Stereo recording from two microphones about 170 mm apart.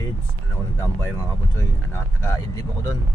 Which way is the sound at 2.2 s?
15° left (ahead or behind).